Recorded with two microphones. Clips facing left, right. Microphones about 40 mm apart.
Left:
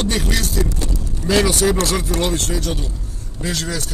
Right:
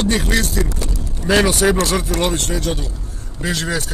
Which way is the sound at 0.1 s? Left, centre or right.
Centre.